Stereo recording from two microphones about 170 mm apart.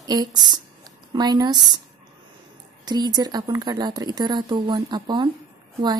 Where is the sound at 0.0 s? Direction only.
25° right (ahead or behind).